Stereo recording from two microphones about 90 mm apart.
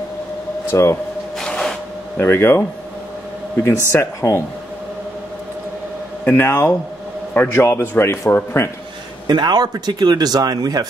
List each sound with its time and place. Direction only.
0.7 s speech: 30° left (ahead or behind)
1.4 s printer: 5° left (ahead or behind)
2.1 s speech: 25° left (ahead or behind)
3.9 s speech: 30° left (ahead or behind)
6.2 s speech: 25° left (ahead or behind)
9.3 s speech: 50° right (ahead or behind)